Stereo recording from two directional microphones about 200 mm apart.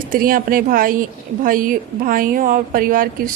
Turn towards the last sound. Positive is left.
turn(degrees=-45)  # may be behind; listen again after turning